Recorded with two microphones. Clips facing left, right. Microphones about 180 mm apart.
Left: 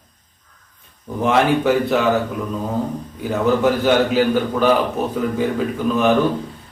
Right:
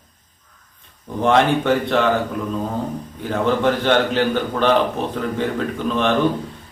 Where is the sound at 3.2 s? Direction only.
5° left (ahead or behind).